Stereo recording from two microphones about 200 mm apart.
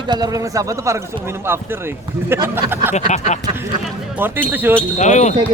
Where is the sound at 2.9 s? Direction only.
35° left (ahead or behind).